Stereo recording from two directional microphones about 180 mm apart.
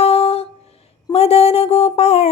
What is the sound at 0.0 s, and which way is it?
Humming, 35° left (ahead or behind).